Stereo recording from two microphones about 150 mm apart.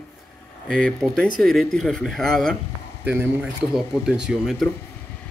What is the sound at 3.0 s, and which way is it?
Speech, 10° right (ahead or behind).